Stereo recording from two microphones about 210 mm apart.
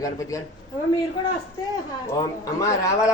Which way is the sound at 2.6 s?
15° left (ahead or behind).